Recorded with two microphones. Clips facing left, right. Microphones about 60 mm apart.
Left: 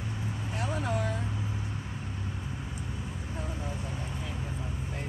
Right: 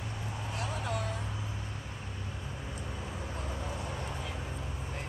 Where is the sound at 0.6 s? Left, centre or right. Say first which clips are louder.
Left 4 dB; left.